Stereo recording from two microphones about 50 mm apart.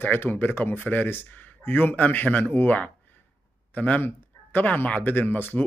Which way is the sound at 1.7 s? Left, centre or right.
Left.